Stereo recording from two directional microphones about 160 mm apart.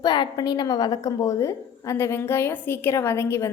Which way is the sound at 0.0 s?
25° left (ahead or behind).